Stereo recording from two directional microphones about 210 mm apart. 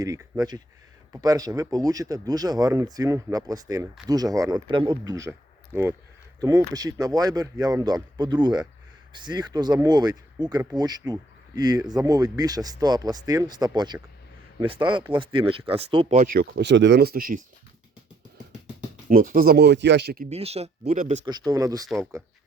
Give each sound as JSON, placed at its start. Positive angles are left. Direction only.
{"t": 0.0, "sound": "speech", "side_deg": -15}
{"t": 19.0, "sound": "speech", "side_deg": -40}
{"t": 20.3, "sound": "speech", "side_deg": -30}
{"t": 21.2, "sound": "speech", "side_deg": -15}